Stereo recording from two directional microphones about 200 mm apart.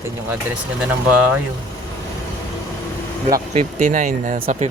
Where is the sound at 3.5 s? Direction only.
40° right (ahead or behind).